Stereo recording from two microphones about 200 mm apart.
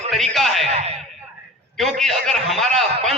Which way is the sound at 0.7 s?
30° right (ahead or behind).